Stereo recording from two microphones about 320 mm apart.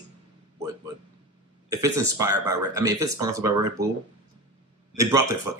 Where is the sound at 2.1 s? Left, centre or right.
Centre.